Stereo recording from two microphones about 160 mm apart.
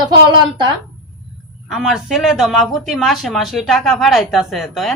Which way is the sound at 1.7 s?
Centre (ahead or behind).